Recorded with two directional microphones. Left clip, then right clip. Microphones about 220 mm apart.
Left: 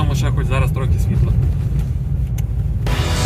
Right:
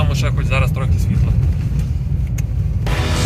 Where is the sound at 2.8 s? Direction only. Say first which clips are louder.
Right 1 dB; centre (ahead or behind).